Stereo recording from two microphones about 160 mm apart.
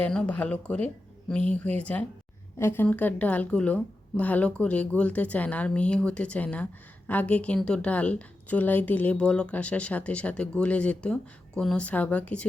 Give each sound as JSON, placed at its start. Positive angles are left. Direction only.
{"t": 0.0, "sound": "a woman's voice", "side_deg": 5}